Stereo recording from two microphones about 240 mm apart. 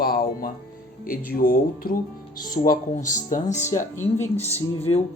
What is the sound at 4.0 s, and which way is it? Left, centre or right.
Speech, centre.